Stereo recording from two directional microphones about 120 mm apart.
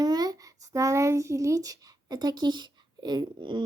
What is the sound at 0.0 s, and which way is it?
Speech, 35° right (ahead or behind).